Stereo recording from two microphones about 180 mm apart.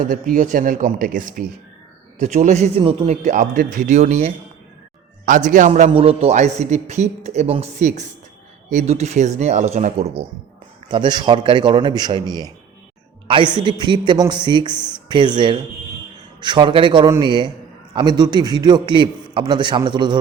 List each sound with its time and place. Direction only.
0.0 s a man's voice: 45° right (ahead or behind)
5.9 s a man's voice: 35° right (ahead or behind)
10.8 s a woman's voice: 25° right (ahead or behind)